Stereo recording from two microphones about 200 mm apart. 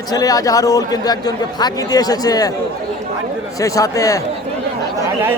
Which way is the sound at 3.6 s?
15° left (ahead or behind).